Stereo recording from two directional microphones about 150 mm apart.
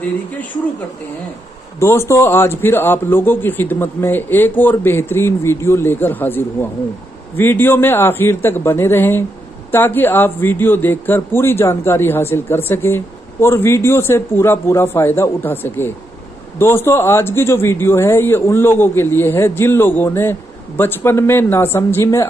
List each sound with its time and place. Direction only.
1.8 s a man's voice: 15° left (ahead or behind)